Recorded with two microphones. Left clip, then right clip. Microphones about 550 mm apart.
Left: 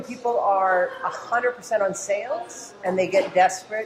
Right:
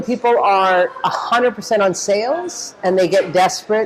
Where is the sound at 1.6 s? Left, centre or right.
Right.